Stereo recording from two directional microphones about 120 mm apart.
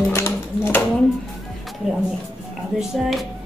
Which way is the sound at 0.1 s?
20° left (ahead or behind).